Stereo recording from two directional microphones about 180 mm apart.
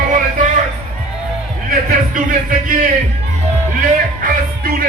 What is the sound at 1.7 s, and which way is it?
Music, 45° right (ahead or behind).